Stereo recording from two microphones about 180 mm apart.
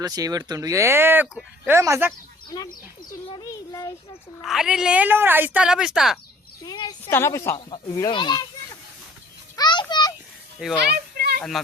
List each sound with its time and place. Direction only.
0.0 s speech: 20° right (ahead or behind)
3.3 s a sound: 20° left (ahead or behind)
4.4 s speech: centre (ahead or behind)
6.7 s a woman's voice: 20° left (ahead or behind)
7.5 s speech: 30° left (ahead or behind)
9.6 s children playing: 25° left (ahead or behind)
10.6 s speech: 5° right (ahead or behind)
10.9 s children playing: 60° right (ahead or behind)
11.6 s speech: centre (ahead or behind)